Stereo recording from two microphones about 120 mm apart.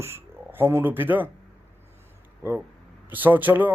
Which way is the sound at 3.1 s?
15° right (ahead or behind).